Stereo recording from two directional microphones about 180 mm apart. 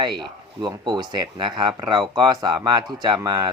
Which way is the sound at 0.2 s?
25° right (ahead or behind).